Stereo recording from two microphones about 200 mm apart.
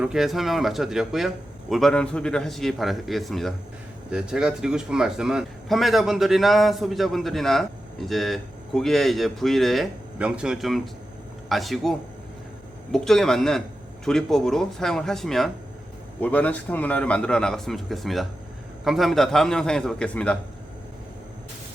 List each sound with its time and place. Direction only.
0.0 s a man's voice: centre (ahead or behind)